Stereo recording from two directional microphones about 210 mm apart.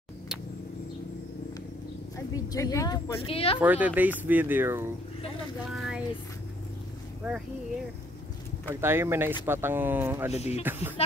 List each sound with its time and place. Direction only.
2.1 s speech: 15° left (ahead or behind)
3.2 s speech: 25° left (ahead or behind)
3.5 s speech: 5° right (ahead or behind)
8.8 s speech: 10° right (ahead or behind)
10.3 s speech: 30° left (ahead or behind)
10.6 s speech: 10° right (ahead or behind)